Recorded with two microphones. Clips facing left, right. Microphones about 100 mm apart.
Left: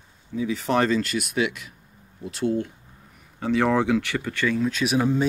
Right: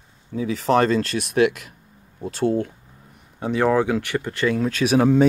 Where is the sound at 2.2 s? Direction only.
35° right (ahead or behind).